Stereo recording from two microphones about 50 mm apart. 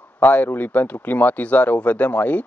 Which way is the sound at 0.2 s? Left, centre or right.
Left.